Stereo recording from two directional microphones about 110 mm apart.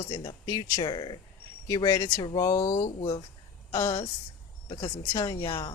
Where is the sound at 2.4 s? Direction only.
30° left (ahead or behind).